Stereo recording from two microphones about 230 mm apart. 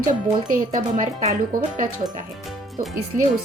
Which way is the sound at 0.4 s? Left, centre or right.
Right.